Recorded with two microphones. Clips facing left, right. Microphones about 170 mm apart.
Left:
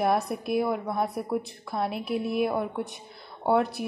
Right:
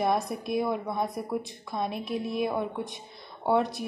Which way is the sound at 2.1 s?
65° left (ahead or behind).